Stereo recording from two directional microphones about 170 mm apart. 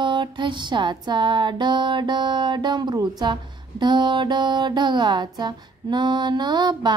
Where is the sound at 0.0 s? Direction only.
30° right (ahead or behind).